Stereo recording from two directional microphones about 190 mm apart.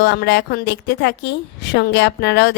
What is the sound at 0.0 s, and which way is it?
A woman's voice, 70° left (ahead or behind).